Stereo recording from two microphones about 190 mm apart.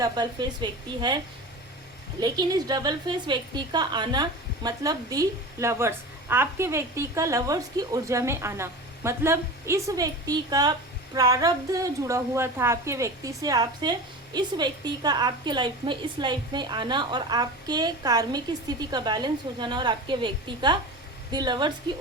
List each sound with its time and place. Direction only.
0.0 s a woman's voice: 20° right (ahead or behind)
2.2 s a woman's voice: 20° right (ahead or behind)